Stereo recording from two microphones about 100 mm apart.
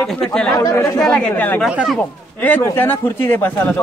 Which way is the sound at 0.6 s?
30° left (ahead or behind).